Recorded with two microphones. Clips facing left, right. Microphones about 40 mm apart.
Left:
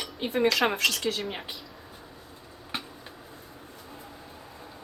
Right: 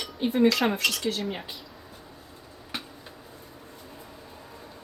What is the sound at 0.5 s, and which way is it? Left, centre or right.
Speech, left.